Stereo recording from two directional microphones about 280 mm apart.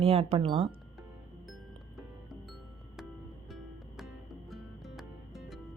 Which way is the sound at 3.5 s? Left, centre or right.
Centre.